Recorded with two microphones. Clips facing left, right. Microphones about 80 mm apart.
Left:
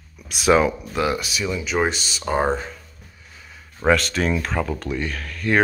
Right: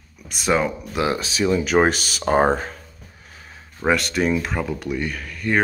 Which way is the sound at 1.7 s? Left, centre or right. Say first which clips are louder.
Right 4 dB; right.